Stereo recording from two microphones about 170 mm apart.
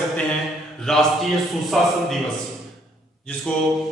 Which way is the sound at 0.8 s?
5° left (ahead or behind).